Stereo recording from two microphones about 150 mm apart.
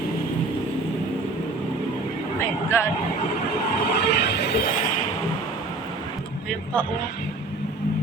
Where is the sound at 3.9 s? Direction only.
90° left.